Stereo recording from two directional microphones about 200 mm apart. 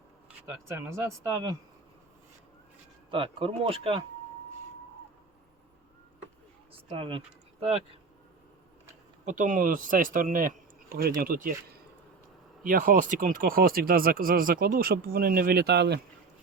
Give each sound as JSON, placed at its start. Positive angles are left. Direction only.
{"t": 0.8, "sound": "speech", "side_deg": -15}
{"t": 3.1, "sound": "speech", "side_deg": -25}
{"t": 6.8, "sound": "speech", "side_deg": -25}
{"t": 9.2, "sound": "speech", "side_deg": -40}
{"t": 12.6, "sound": "speech", "side_deg": -45}